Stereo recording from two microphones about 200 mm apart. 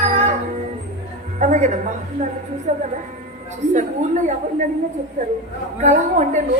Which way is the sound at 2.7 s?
35° right (ahead or behind).